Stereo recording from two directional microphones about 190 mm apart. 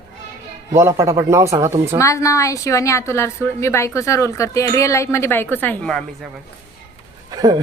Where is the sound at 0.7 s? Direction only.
15° right (ahead or behind).